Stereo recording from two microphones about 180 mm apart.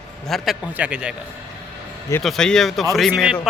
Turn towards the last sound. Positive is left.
turn(degrees=0)  # may be behind; listen again after turning